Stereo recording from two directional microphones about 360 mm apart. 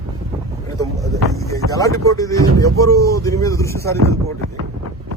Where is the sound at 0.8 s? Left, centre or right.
Centre.